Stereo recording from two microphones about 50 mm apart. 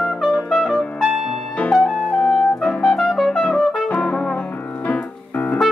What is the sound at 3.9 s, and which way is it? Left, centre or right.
Music, left.